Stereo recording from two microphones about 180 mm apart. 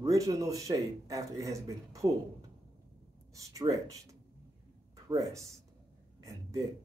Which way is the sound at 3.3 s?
20° right (ahead or behind).